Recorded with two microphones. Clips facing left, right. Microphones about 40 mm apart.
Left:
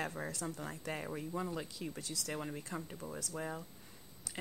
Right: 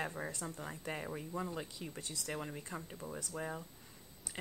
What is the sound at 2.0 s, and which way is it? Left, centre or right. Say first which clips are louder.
Speech: left 2 dB; right.